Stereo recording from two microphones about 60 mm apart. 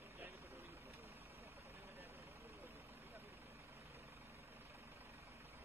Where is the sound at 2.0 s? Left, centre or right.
Right.